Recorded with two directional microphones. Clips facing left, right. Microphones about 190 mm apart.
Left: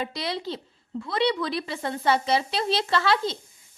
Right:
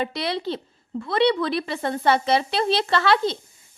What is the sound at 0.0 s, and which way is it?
A woman's voice, 65° right (ahead or behind).